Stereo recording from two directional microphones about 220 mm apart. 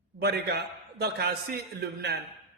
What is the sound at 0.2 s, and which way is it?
A man's voice, 45° right (ahead or behind).